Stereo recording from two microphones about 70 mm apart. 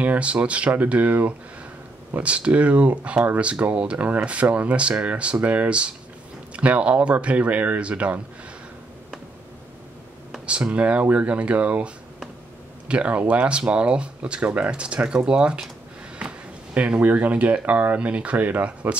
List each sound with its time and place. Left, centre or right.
0.0 s speech: centre
10.4 s speech: centre